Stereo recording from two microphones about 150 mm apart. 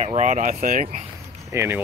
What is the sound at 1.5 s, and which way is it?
Speech, 15° right (ahead or behind).